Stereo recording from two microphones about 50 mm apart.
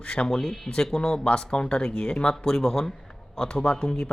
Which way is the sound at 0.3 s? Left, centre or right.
Centre.